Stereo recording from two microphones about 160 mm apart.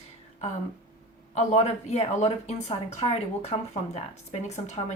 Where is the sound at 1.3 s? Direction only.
45° left (ahead or behind).